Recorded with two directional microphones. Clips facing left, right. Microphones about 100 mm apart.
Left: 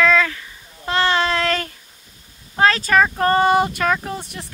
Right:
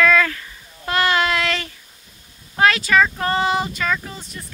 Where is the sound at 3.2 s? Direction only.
45° left (ahead or behind).